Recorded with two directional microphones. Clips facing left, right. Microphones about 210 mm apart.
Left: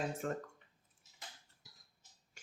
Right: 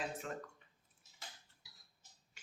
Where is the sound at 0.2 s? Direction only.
45° left (ahead or behind).